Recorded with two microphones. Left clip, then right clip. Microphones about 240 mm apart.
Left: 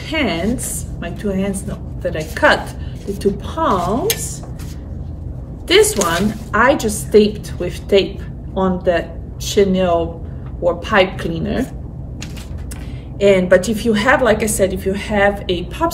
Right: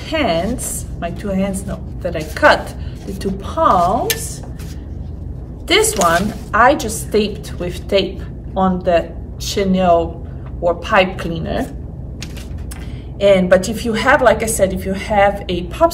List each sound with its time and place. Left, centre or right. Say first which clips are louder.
0.1 s a woman's voice: right 2 dB; centre
5.7 s a woman's voice: even; centre
13.2 s a woman's voice: even; centre